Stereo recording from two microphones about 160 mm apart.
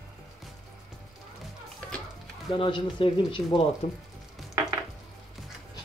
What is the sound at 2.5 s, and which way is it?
Speech, 30° left (ahead or behind).